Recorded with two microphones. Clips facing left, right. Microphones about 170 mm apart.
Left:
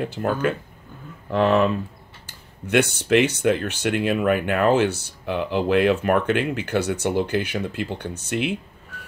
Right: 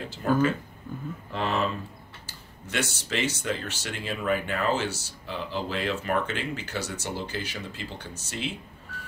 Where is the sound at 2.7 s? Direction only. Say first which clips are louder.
Left 12 dB; 60° left (ahead or behind).